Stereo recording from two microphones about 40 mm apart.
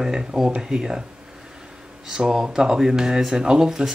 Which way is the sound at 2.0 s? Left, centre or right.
Centre.